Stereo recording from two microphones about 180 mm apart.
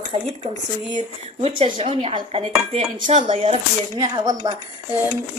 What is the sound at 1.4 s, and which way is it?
Speech, 30° right (ahead or behind).